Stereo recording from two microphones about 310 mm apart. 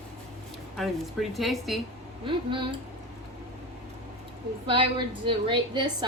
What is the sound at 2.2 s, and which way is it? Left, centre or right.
Speech, centre.